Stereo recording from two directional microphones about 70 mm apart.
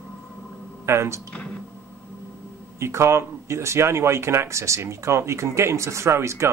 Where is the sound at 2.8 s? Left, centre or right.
Right.